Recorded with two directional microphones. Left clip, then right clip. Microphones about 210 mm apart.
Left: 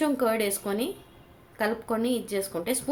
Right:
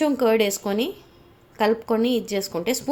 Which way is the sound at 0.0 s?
35° right (ahead or behind).